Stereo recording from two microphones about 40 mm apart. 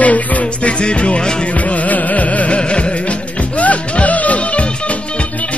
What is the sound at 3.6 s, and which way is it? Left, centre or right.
Music, left.